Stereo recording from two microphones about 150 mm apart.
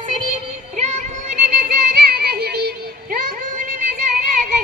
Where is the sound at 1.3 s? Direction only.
75° right (ahead or behind).